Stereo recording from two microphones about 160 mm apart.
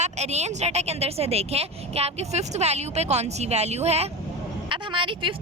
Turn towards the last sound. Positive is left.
turn(degrees=-30)  # may be behind; listen again after turning